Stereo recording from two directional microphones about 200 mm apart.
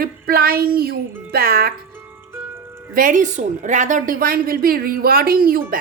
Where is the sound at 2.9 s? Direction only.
40° right (ahead or behind).